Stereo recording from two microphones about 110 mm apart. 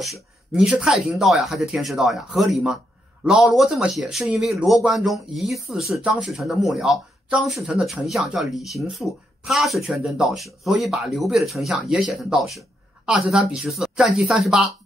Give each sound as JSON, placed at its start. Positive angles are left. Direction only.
{"t": 0.0, "sound": "speech", "side_deg": 0}